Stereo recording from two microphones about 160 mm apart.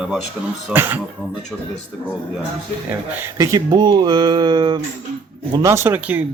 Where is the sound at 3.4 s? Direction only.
25° right (ahead or behind).